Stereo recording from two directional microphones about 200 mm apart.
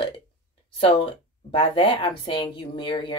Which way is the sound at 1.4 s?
25° left (ahead or behind).